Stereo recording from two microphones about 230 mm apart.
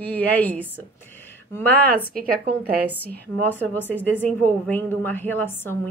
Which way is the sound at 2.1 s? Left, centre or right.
Right.